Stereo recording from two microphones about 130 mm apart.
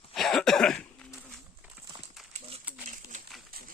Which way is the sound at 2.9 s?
80° right.